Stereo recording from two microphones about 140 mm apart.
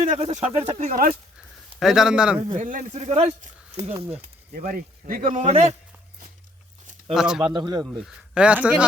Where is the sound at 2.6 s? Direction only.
70° right (ahead or behind).